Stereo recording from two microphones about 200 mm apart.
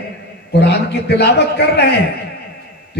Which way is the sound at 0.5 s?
55° left (ahead or behind).